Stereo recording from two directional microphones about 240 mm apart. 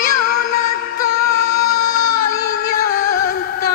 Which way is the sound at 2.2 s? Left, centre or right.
Left.